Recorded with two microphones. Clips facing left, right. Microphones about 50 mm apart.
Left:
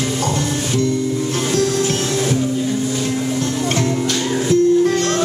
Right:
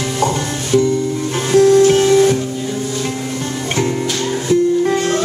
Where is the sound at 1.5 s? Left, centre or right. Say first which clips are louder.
Right 11 dB; centre.